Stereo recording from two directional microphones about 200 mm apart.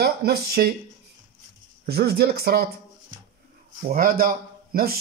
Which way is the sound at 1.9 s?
55° right (ahead or behind).